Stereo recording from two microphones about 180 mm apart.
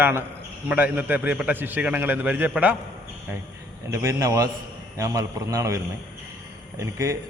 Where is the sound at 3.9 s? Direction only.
15° right (ahead or behind).